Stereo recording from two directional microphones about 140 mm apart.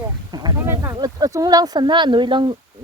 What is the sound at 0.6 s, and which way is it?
A man's voice, 15° right (ahead or behind).